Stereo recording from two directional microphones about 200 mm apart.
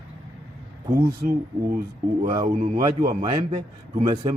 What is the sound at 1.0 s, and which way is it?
Speech, 45° right (ahead or behind).